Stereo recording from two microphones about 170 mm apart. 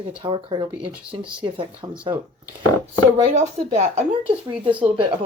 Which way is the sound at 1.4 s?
30° right (ahead or behind).